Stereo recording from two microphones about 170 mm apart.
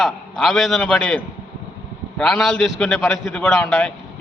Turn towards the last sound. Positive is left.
turn(degrees=5)  # may be behind; listen again after turning